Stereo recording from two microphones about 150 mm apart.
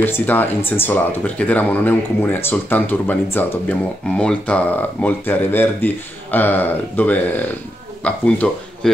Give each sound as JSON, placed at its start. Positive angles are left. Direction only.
{"t": 0.0, "sound": "speech", "side_deg": 15}